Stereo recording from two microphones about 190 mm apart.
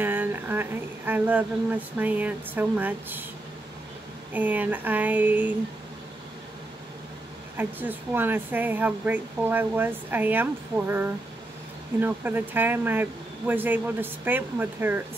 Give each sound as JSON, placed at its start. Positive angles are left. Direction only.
{"t": 0.0, "sound": "speech", "side_deg": -10}
{"t": 4.3, "sound": "speech", "side_deg": -10}
{"t": 7.5, "sound": "speech", "side_deg": -10}